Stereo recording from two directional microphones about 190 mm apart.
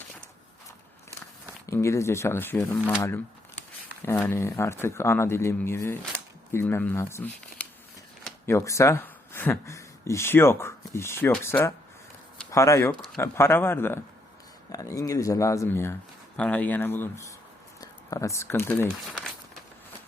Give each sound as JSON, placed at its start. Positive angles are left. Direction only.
{"t": 1.6, "sound": "speech", "side_deg": 15}